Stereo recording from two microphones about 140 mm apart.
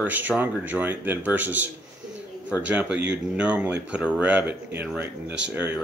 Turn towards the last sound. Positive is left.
turn(degrees=-10)  # may be behind; listen again after turning